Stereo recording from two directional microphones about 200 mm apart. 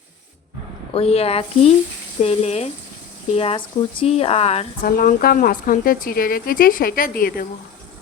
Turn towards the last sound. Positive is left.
turn(degrees=45)  # may be behind; listen again after turning